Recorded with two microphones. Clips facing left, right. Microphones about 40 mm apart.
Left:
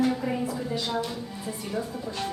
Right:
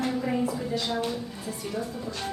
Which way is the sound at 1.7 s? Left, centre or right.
Centre.